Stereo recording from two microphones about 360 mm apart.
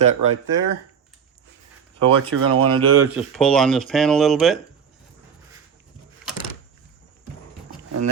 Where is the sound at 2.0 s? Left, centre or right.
Right.